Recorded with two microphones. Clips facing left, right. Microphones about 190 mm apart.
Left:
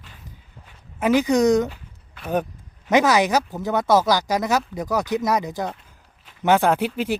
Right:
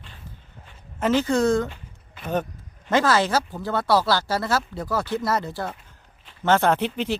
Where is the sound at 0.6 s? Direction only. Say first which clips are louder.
Left 2 dB; 10° left (ahead or behind).